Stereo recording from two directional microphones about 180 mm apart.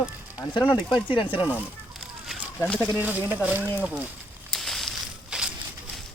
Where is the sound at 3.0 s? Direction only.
10° right (ahead or behind).